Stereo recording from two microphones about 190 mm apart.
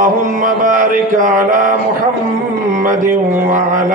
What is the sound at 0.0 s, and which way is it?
Mantra, 45° right (ahead or behind).